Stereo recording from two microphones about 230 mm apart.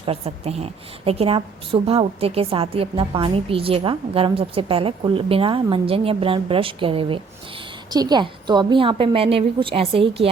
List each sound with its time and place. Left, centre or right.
0.0 s a woman's voice: right